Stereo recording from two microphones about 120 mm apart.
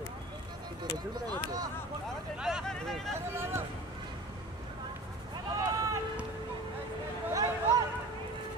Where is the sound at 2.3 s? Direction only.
5° right (ahead or behind).